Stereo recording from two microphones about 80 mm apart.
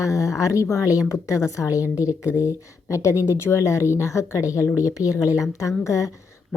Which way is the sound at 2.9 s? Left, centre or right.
Left.